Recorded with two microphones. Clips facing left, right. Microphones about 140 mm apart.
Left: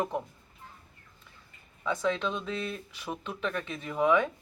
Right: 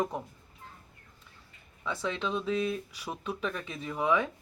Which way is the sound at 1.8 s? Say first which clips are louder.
Left 4 dB; 5° right (ahead or behind).